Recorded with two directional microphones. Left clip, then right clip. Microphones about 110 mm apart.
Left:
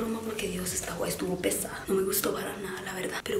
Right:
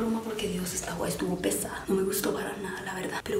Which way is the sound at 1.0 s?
Centre (ahead or behind).